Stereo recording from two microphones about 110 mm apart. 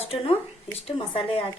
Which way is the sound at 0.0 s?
65° left (ahead or behind).